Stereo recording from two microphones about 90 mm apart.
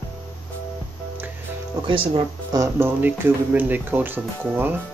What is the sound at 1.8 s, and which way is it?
Speech, 70° right (ahead or behind).